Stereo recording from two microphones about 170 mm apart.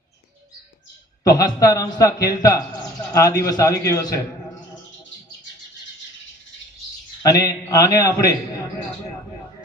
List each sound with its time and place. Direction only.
1.2 s a man's voice: 20° left (ahead or behind)
7.2 s a man's voice: 20° left (ahead or behind)